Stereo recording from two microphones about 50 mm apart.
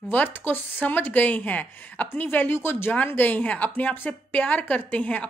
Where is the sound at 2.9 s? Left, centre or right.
Left.